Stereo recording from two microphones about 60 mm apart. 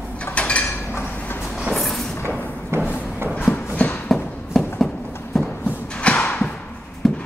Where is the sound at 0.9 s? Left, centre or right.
Left.